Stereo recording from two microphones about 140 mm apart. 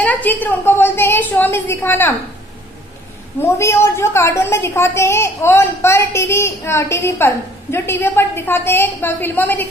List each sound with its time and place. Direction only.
0.0 s a woman's voice: 10° left (ahead or behind)
3.4 s a woman's voice: 20° left (ahead or behind)